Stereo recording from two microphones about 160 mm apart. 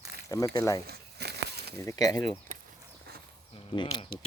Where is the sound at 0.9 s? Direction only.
90° right.